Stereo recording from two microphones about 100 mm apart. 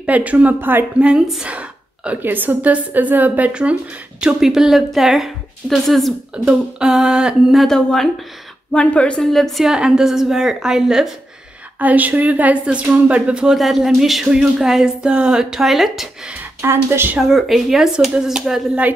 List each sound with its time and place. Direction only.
0.0 s a woman's voice: 15° right (ahead or behind)
11.8 s a woman's voice: 15° right (ahead or behind)
16.3 s speech: 25° right (ahead or behind)
17.3 s speech: centre (ahead or behind)